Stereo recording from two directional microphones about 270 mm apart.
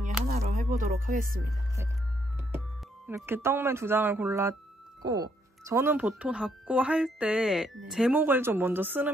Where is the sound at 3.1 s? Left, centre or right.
Centre.